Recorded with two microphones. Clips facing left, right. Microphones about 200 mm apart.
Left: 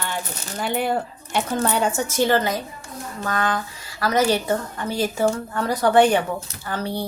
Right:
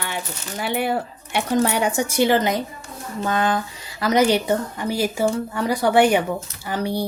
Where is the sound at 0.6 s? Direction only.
10° right (ahead or behind).